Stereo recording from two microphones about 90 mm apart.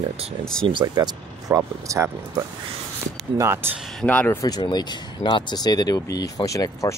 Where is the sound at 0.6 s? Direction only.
60° right (ahead or behind).